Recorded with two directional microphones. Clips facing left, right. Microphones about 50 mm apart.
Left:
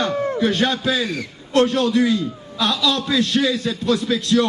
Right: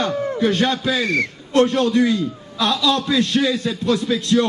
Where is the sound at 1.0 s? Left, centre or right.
Right.